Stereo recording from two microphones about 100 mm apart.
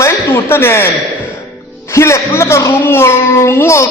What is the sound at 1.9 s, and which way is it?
A man's voice, 30° left (ahead or behind).